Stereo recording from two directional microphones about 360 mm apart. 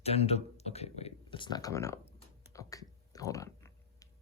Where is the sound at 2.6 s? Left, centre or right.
Centre.